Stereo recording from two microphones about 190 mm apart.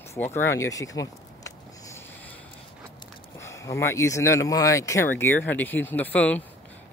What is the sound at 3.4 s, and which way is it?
Speech, 15° left (ahead or behind).